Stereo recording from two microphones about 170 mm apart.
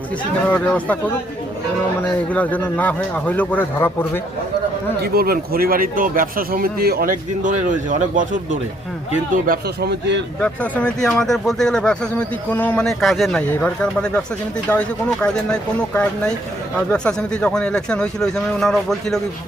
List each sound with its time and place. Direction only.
0.4 s a man's voice: 10° left (ahead or behind)
2.3 s a man's voice: 10° left (ahead or behind)
4.9 s speech: 60° right (ahead or behind)
9.3 s speech: 65° right (ahead or behind); by 10.2 s 85° right
10.4 s speech: 5° left (ahead or behind)